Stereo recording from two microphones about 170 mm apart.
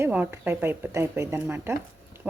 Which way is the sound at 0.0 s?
10° right (ahead or behind).